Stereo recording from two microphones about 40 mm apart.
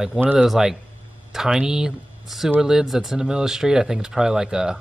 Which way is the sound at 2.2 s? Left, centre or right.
Centre.